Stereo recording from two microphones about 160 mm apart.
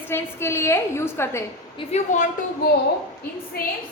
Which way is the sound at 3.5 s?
70° left (ahead or behind).